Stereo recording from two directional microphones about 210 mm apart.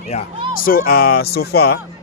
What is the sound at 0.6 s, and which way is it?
Speech, 45° left (ahead or behind).